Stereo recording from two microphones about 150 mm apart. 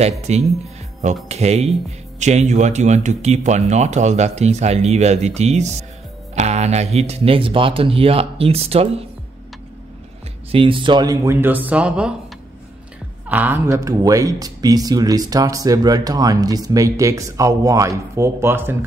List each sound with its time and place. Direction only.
0.3 s speech: 50° right (ahead or behind)
10.5 s speech: 35° right (ahead or behind); by 12.2 s 5° right (ahead or behind)
13.3 s speech: 10° right (ahead or behind)